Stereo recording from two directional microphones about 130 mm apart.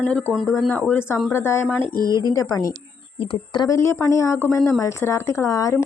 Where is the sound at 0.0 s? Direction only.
10° left (ahead or behind).